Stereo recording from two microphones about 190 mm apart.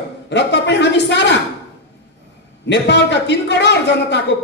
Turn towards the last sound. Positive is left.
turn(degrees=65)  # may be behind; listen again after turning